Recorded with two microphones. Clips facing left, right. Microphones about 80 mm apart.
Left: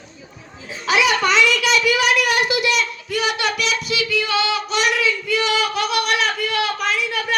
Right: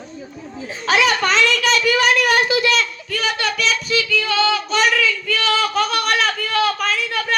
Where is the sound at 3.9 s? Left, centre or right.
Centre.